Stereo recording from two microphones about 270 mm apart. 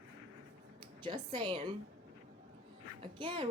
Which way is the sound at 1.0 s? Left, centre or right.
Centre.